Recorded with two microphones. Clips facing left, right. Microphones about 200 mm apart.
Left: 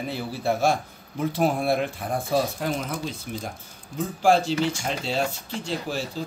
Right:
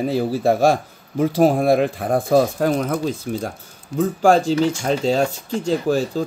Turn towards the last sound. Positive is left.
turn(degrees=-45)  # may be behind; listen again after turning